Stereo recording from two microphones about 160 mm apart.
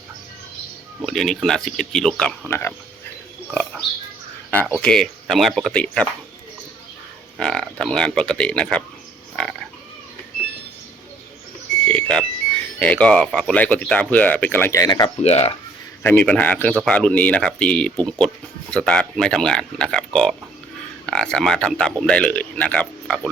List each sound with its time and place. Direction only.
1.0 s speech: centre (ahead or behind)
4.8 s speech: 5° left (ahead or behind)
7.3 s speech: 5° left (ahead or behind)
9.3 s frog: 5° left (ahead or behind)
11.9 s alarm clock: 5° left (ahead or behind)
12.8 s speech: 10° left (ahead or behind); by 15.1 s 25° left (ahead or behind)
15.2 s speech: 40° left (ahead or behind)
16.0 s speech: 10° left (ahead or behind)